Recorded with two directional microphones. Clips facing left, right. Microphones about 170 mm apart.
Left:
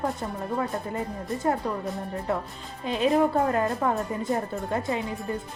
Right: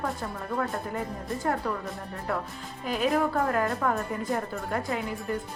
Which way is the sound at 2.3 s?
20° left (ahead or behind).